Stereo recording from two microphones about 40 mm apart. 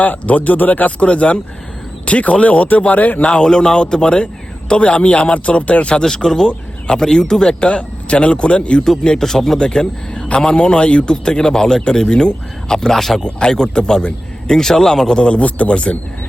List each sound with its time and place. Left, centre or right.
0.0 s speech: left
3.2 s speech: left
6.0 s a man's voice: centre
7.7 s speech: left
9.0 s a man's voice: centre
15.4 s speech: left